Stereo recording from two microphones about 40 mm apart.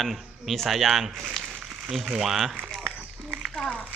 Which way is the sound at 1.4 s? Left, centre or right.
Centre.